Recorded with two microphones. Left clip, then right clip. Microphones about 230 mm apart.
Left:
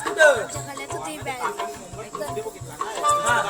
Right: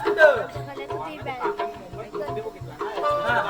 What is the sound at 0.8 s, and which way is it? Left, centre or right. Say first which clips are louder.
Music: right 1 dB; left.